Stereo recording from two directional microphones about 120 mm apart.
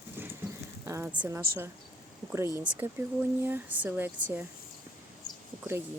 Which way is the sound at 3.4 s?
15° right (ahead or behind).